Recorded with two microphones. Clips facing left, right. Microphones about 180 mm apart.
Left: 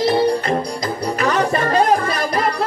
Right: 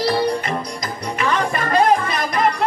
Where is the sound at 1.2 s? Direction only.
40° left (ahead or behind).